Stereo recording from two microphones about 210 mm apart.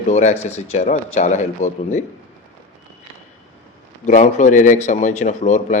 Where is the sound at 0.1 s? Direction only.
35° left (ahead or behind).